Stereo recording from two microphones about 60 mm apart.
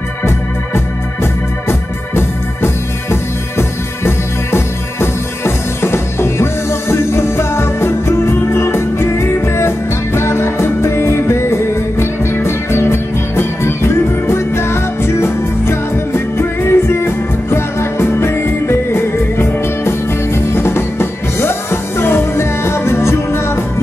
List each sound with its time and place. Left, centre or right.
0.7 s organ: left